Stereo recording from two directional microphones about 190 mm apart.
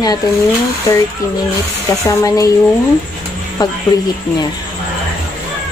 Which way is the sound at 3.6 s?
20° left (ahead or behind).